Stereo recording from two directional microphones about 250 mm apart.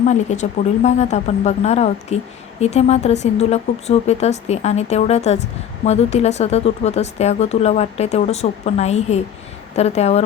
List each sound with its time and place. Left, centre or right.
0.0 s speech: left